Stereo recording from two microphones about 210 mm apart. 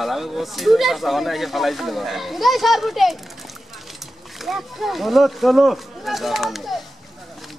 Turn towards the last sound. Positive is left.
turn(degrees=0)  # may be behind; listen again after turning